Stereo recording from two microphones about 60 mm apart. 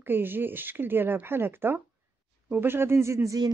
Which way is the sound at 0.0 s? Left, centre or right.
Right.